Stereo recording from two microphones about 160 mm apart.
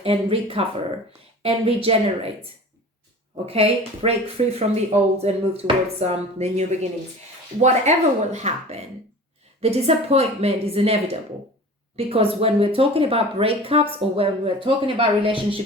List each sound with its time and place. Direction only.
0.0 s speech: 35° right (ahead or behind)